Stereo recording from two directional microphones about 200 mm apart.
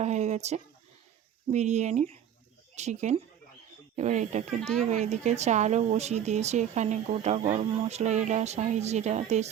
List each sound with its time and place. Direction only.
0.0 s speech: 35° right (ahead or behind)